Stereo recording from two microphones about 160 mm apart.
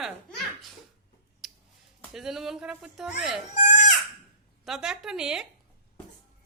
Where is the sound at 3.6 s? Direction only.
50° left (ahead or behind).